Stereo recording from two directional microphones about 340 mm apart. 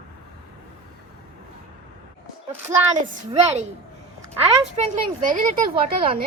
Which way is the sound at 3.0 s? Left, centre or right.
Centre.